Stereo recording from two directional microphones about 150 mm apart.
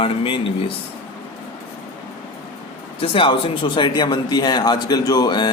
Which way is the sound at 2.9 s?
35° left (ahead or behind).